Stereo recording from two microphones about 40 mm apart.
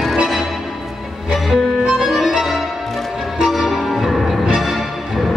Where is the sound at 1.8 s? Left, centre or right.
Centre.